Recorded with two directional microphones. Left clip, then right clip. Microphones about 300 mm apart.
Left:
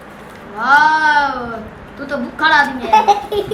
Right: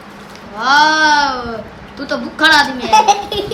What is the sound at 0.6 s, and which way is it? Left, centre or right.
A woman's voice, right.